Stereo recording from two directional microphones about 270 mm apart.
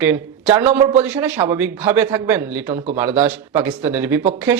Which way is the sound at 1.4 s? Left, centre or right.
Centre.